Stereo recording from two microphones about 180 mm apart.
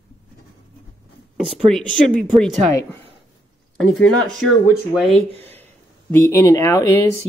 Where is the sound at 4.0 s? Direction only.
Centre (ahead or behind).